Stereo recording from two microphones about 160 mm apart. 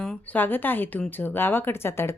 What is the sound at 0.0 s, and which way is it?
Speech, 10° left (ahead or behind).